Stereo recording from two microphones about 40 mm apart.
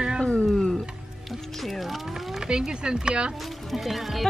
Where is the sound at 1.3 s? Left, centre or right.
Centre.